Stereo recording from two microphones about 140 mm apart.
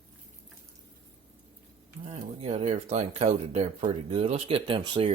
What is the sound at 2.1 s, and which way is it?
Speech, 45° right (ahead or behind).